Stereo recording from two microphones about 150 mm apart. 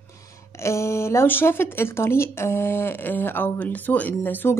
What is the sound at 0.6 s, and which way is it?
Speech, 20° left (ahead or behind).